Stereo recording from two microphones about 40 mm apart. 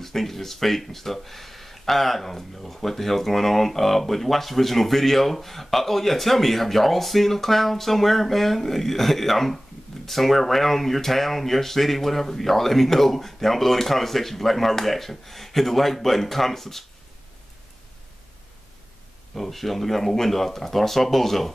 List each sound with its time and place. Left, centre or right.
0.0 s speech: centre
19.3 s speech: centre